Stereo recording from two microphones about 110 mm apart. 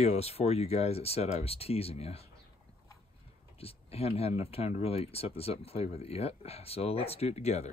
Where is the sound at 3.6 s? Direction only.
65° left (ahead or behind).